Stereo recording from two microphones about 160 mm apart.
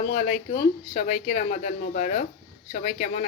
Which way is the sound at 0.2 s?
40° left (ahead or behind).